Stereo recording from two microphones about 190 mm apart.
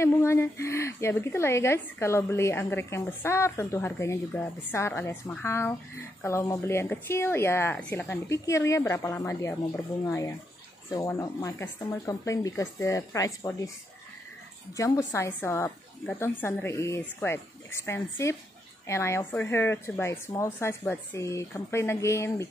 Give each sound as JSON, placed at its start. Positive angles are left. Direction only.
{"t": 0.0, "sound": "a woman's voice", "side_deg": 15}
{"t": 14.7, "sound": "a woman's voice", "side_deg": 15}